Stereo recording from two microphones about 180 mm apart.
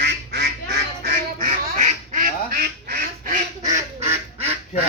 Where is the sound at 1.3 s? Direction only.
45° right (ahead or behind).